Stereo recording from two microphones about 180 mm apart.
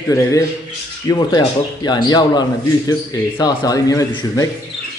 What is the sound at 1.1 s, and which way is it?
A man's voice, 20° left (ahead or behind).